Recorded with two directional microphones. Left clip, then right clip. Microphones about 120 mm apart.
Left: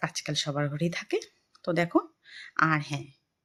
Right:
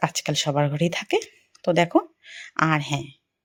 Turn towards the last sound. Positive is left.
turn(degrees=-40)  # may be behind; listen again after turning